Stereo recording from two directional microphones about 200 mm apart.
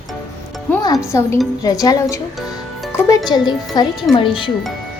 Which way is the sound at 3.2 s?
20° left (ahead or behind).